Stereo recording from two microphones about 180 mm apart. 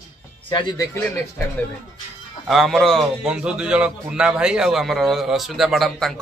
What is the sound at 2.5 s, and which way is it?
Speech, centre (ahead or behind).